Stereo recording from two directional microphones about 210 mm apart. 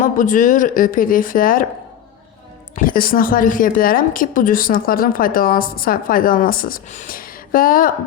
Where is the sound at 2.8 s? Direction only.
40° left (ahead or behind).